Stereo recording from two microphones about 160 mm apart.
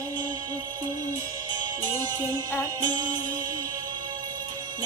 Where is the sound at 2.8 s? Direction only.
25° right (ahead or behind).